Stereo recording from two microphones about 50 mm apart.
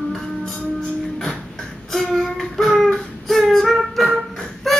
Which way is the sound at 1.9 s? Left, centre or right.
Centre.